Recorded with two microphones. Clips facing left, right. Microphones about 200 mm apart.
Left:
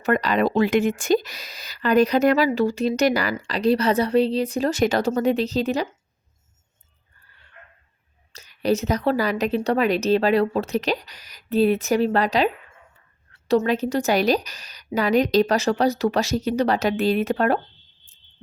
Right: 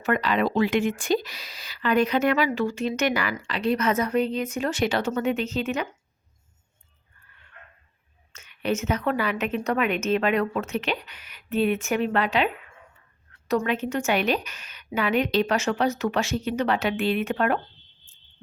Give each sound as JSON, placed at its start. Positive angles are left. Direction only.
{"t": 0.0, "sound": "speech", "side_deg": 40}
{"t": 7.3, "sound": "dog", "side_deg": 35}
{"t": 8.3, "sound": "speech", "side_deg": 35}
{"t": 13.5, "sound": "speech", "side_deg": 35}